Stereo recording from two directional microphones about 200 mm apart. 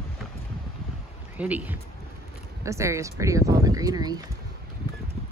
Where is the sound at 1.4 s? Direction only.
10° right (ahead or behind).